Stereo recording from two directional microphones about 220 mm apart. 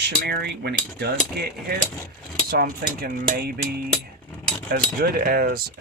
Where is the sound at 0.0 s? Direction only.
45° right (ahead or behind).